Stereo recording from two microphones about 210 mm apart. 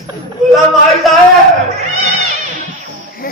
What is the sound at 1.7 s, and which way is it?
Cat, 30° right (ahead or behind).